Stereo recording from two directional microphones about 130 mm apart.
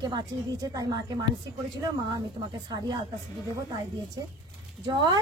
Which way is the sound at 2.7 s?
35° right (ahead or behind).